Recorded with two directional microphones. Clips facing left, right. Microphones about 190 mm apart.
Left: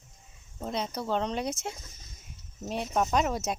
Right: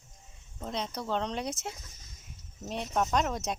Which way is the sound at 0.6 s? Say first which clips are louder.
Left 3 dB; 5° left (ahead or behind).